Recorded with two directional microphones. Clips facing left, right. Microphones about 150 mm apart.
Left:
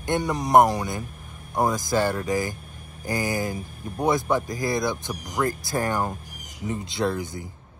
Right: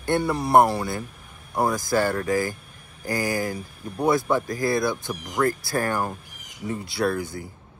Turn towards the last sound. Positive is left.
turn(degrees=20)  # may be behind; listen again after turning